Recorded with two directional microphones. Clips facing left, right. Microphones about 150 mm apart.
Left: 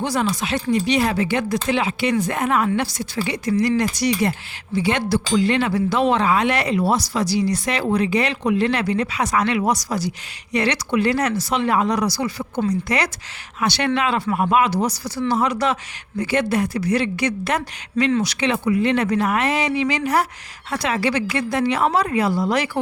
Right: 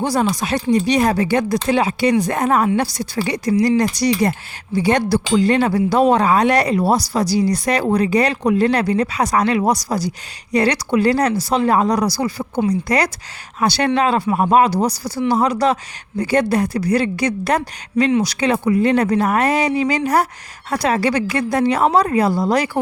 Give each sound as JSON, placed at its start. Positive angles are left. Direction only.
{"t": 0.0, "sound": "speech", "side_deg": -35}
{"t": 14.9, "sound": "speech", "side_deg": -10}
{"t": 15.4, "sound": "speech", "side_deg": -35}